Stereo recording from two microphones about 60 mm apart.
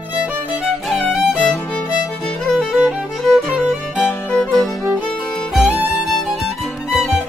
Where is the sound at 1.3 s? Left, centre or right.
Centre.